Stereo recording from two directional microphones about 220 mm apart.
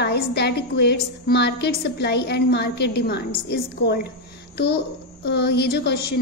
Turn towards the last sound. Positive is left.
turn(degrees=50)  # may be behind; listen again after turning